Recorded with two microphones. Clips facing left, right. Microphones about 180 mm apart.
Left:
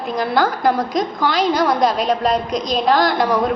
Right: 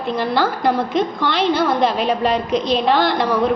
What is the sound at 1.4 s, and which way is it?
Speech, 40° left (ahead or behind).